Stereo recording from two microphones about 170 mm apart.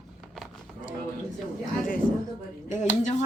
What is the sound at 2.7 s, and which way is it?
Speech, 45° left (ahead or behind).